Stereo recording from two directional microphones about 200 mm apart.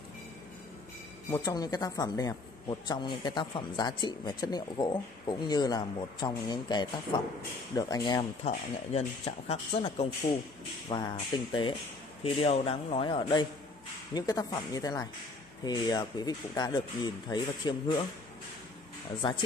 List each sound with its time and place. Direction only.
1.3 s a woman's voice: 20° left (ahead or behind)
19.2 s speech: 25° left (ahead or behind)